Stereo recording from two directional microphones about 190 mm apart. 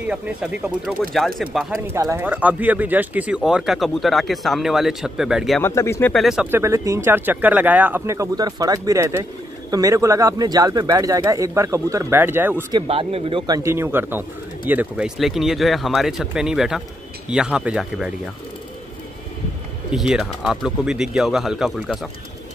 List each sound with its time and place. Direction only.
0.0 s speech: 5° right (ahead or behind)
1.9 s speech: 15° right (ahead or behind)
5.6 s speech: 15° left (ahead or behind)
6.1 s speech: centre (ahead or behind)
12.7 s speech: 30° right (ahead or behind)
13.6 s speech: 15° right (ahead or behind)
19.9 s speech: centre (ahead or behind)